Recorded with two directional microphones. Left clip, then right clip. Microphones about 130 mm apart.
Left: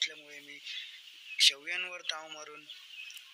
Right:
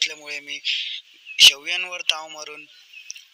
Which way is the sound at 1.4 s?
50° right (ahead or behind).